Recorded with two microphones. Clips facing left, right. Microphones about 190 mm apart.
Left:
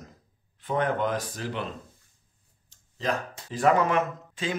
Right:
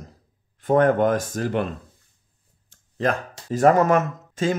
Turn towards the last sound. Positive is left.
turn(degrees=-45)  # may be behind; listen again after turning